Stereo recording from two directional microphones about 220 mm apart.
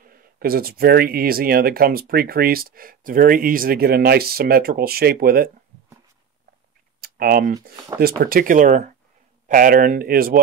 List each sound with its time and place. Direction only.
0.0 s speech: 40° right (ahead or behind)
7.0 s a sound: 45° right (ahead or behind)
8.0 s speech: 40° right (ahead or behind)